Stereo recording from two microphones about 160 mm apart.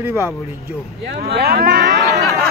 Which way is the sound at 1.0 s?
80° right.